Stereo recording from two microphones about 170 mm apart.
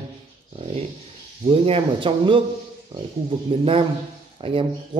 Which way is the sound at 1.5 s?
35° right (ahead or behind).